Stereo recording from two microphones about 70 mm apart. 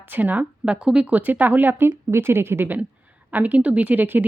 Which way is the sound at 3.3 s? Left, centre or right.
Right.